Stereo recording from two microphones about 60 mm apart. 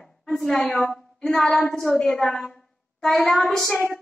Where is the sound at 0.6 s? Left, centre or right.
Centre.